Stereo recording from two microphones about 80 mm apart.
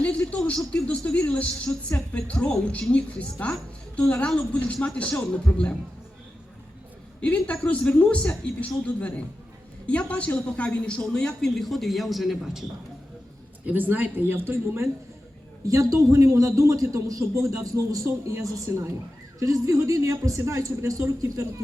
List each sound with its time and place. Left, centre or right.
0.0 s speech: centre
7.2 s speech: centre
13.7 s speech: right
15.6 s a man's voice: right